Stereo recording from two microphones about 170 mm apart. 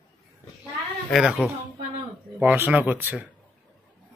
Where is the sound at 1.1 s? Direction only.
5° right (ahead or behind).